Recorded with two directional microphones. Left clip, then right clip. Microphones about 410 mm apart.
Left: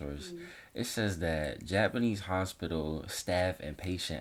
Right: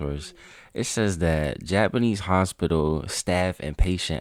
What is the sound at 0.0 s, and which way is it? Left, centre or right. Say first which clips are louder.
Speech: right 8 dB; right.